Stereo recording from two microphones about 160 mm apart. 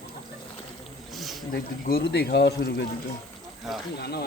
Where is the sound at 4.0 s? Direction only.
80° left.